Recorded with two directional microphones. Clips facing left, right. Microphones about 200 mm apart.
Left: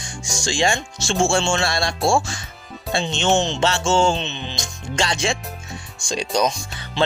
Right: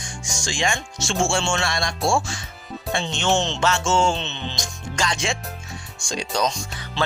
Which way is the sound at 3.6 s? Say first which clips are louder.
Left 2 dB; 30° left (ahead or behind).